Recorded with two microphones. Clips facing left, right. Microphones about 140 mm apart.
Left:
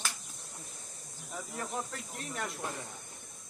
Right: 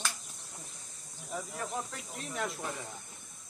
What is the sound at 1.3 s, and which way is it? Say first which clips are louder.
Speech: right 2 dB; centre (ahead or behind).